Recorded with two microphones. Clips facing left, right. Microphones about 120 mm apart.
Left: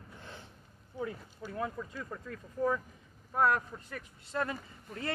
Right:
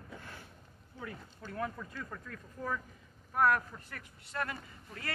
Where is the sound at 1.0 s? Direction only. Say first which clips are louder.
Left 6 dB; 20° left (ahead or behind).